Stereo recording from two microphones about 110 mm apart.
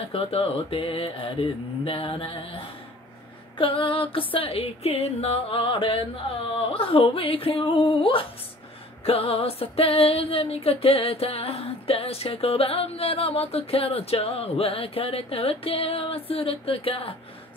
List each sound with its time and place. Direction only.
0.1 s music: 60° left (ahead or behind)